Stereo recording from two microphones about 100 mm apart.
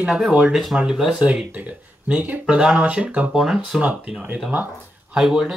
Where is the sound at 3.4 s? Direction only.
Centre (ahead or behind).